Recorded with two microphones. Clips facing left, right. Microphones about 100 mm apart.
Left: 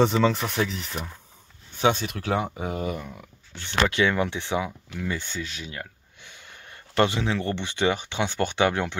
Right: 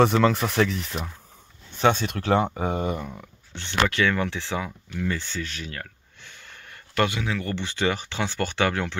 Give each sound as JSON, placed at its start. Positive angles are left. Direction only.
{"t": 0.0, "sound": "speech", "side_deg": 0}
{"t": 2.7, "sound": "speech", "side_deg": -35}
{"t": 3.0, "sound": "speech", "side_deg": -5}
{"t": 3.5, "sound": "speech", "side_deg": 15}